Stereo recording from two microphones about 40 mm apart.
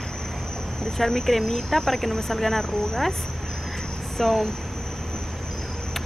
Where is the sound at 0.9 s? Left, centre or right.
Centre.